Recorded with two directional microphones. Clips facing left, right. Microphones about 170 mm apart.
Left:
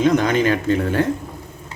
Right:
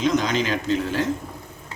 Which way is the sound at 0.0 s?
55° left (ahead or behind).